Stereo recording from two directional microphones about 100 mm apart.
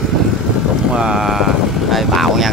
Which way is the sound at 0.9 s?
5° right (ahead or behind).